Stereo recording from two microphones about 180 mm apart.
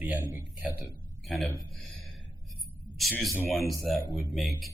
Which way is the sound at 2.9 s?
Centre (ahead or behind).